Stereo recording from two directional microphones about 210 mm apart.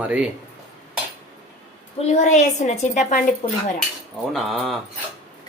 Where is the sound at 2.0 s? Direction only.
35° left (ahead or behind).